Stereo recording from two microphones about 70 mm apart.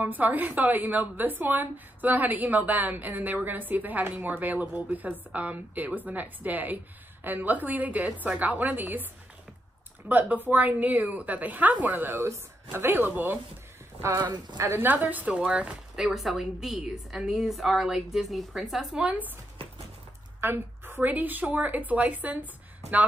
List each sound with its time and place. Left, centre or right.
0.0 s a woman's voice: right
10.3 s a woman's voice: right
12.2 s speech: right
14.1 s speech: right
14.8 s a woman's voice: right
16.1 s a woman's voice: centre
19.0 s a woman's voice: right
20.3 s a woman's voice: right